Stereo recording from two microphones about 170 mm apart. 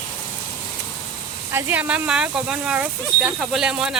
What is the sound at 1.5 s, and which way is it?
Speech, 10° right (ahead or behind).